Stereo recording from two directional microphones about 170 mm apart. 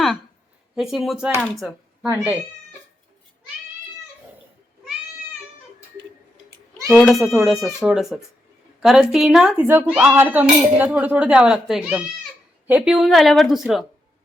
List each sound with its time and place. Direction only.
0.8 s speech: centre (ahead or behind)
1.5 s a sound: centre (ahead or behind)
2.0 s speech: 15° right (ahead or behind)
6.8 s speech: centre (ahead or behind)